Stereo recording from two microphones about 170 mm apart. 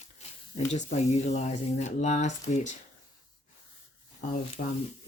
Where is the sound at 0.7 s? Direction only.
40° left (ahead or behind).